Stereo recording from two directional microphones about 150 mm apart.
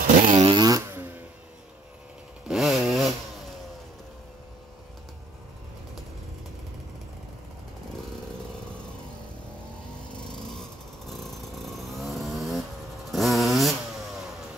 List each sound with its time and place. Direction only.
0.2 s fart: 35° right (ahead or behind)
2.4 s chainsaw: centre (ahead or behind)
12.0 s vehicle: centre (ahead or behind)